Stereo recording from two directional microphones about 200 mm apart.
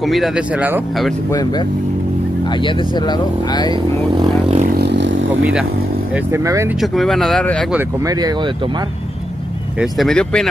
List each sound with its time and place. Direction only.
0.0 s speech: centre (ahead or behind)
2.6 s speech: 25° left (ahead or behind)
4.7 s vehicle: 60° right (ahead or behind)
6.1 s speech: 15° right (ahead or behind)
6.8 s speech: centre (ahead or behind)
8.0 s speech: 20° right (ahead or behind)
9.8 s speech: centre (ahead or behind)